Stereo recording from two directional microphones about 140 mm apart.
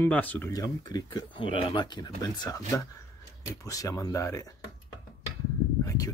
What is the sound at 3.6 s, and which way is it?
Speech, 25° left (ahead or behind).